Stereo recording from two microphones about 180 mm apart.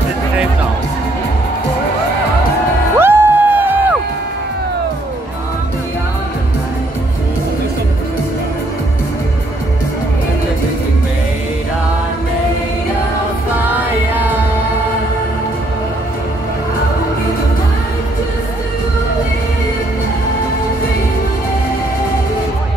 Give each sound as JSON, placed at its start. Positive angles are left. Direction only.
{"t": 3.0, "sound": "music", "side_deg": -10}
{"t": 13.7, "sound": "music", "side_deg": -10}